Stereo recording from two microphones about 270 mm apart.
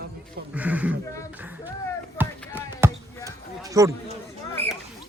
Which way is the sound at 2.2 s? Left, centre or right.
Centre.